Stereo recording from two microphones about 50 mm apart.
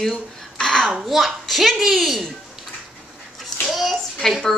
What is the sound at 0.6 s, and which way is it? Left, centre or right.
Babbling, centre.